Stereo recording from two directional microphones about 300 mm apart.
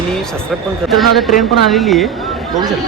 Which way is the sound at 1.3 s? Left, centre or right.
Left.